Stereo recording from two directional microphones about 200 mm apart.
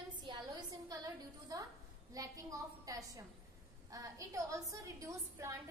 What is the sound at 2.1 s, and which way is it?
A woman's voice, 15° right (ahead or behind).